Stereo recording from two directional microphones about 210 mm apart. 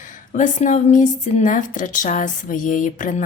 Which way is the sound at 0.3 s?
35° left (ahead or behind).